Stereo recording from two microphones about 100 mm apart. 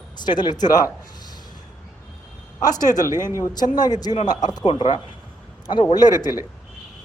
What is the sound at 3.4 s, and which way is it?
Speech, 40° left (ahead or behind).